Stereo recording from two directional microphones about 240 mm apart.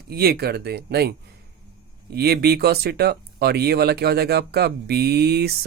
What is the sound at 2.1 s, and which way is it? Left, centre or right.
Speech, right.